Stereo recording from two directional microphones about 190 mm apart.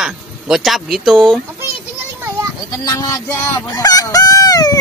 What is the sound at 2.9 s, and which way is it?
Fowl, 20° left (ahead or behind).